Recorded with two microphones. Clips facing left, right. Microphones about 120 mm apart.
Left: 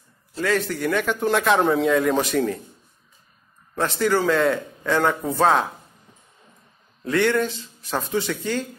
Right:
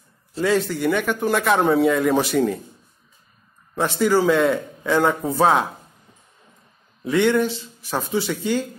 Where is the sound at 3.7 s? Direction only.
10° right (ahead or behind).